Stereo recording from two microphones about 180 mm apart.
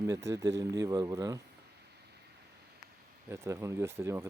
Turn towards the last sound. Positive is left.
turn(degrees=-15)  # may be behind; listen again after turning